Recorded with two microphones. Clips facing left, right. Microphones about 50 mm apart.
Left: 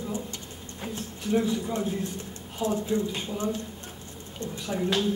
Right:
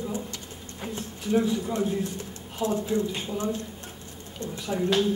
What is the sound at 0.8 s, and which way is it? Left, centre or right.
A man's voice, centre.